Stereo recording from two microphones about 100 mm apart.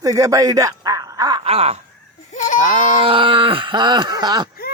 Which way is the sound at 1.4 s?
90° right.